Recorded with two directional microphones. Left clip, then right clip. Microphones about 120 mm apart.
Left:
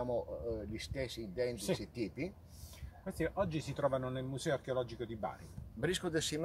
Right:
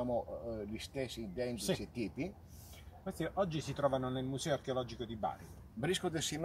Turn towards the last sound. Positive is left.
turn(degrees=15)  # may be behind; listen again after turning